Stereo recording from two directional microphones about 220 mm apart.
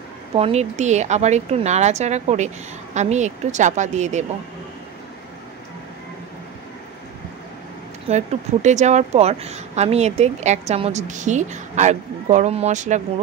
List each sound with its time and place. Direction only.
0.3 s speech: 30° right (ahead or behind)
8.1 s speech: 25° right (ahead or behind)